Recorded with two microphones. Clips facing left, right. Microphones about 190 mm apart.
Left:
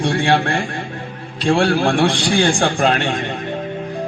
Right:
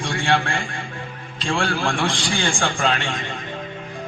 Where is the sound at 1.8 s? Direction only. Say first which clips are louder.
Left 7 dB; 60° left (ahead or behind).